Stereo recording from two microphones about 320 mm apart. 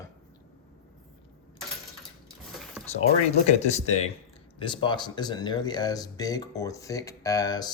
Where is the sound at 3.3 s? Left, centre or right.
Centre.